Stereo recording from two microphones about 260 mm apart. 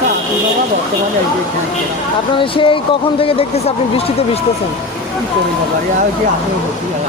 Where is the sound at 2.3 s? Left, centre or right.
Centre.